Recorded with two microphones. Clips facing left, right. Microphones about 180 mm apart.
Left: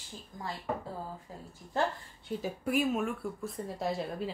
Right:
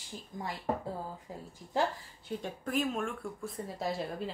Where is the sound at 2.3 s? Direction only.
5° left (ahead or behind).